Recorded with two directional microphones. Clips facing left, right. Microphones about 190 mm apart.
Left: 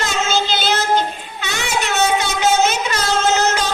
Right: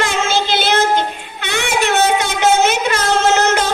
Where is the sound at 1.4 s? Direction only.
55° right (ahead or behind).